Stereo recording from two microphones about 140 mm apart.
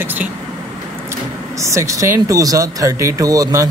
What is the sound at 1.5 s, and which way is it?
Speech, 20° right (ahead or behind).